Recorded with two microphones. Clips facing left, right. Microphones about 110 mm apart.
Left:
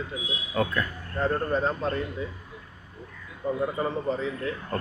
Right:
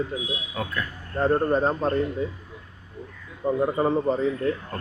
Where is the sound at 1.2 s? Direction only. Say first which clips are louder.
Right 4 dB; 30° right (ahead or behind).